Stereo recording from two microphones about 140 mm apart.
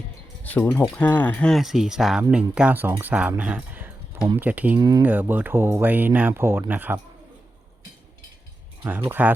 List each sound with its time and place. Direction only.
0.4 s speech: 10° left (ahead or behind); by 4.8 s 10° right (ahead or behind)
4.8 s speech: 25° right (ahead or behind)
5.0 s speech: 15° right (ahead or behind)
8.8 s speech: 15° right (ahead or behind)